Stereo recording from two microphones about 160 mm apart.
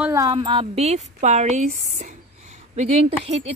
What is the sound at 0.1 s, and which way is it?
Speech, 25° right (ahead or behind).